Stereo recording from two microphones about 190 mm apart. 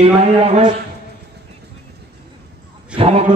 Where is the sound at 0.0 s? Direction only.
35° right (ahead or behind).